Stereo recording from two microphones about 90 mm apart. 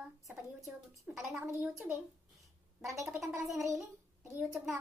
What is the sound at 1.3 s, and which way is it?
Speech, 35° right (ahead or behind).